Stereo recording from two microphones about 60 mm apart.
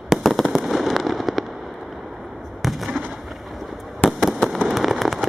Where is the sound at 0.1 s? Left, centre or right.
Centre.